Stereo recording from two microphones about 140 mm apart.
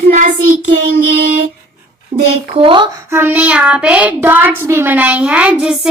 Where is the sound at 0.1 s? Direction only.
65° right (ahead or behind).